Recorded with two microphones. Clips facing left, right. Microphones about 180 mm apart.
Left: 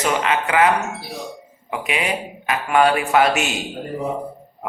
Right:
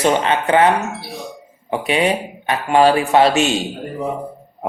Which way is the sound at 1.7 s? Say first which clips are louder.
Right 6 dB; 30° right (ahead or behind).